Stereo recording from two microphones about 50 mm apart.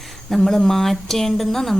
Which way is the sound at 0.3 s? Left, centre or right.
Centre.